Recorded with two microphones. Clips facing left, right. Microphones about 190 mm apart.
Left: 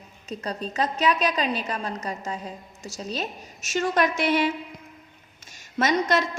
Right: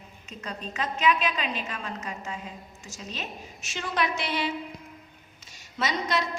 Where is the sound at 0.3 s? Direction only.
35° left (ahead or behind).